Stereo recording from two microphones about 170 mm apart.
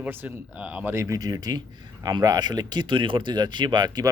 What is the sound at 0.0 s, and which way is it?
Speech, 10° right (ahead or behind).